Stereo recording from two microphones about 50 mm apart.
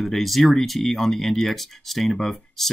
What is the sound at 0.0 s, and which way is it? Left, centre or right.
Speech, centre.